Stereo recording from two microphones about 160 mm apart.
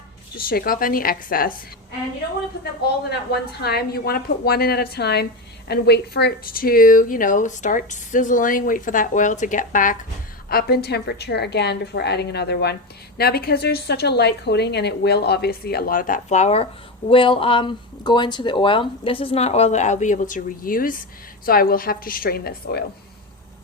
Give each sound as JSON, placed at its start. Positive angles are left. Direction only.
{"t": 0.3, "sound": "speech", "side_deg": 65}
{"t": 2.8, "sound": "speech", "side_deg": 85}
{"t": 10.5, "sound": "a woman's voice", "side_deg": 75}
{"t": 13.1, "sound": "a woman's voice", "side_deg": 80}